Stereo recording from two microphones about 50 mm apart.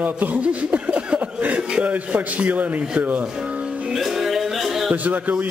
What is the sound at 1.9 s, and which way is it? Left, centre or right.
Speech, right.